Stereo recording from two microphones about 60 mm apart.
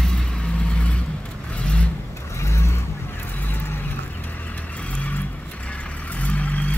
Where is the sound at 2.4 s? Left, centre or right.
Left.